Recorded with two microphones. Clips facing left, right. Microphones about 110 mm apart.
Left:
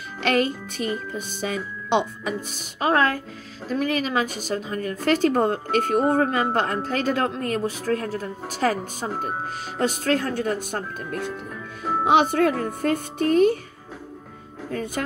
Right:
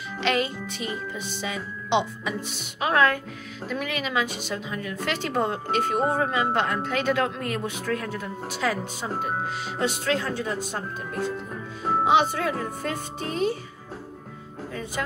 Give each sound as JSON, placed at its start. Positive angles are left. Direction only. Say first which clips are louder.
{"t": 0.2, "sound": "speech", "louder": "left 3 dB", "side_deg": 45}
{"t": 2.8, "sound": "a woman's voice", "louder": "left 1 dB", "side_deg": 35}
{"t": 9.8, "sound": "speech", "louder": "left 4 dB", "side_deg": 45}
{"t": 12.1, "sound": "speech", "louder": "left 5 dB", "side_deg": 55}
{"t": 14.7, "sound": "speech", "louder": "left 4 dB", "side_deg": 50}